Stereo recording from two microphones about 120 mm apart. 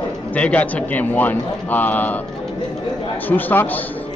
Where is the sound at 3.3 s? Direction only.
15° left (ahead or behind).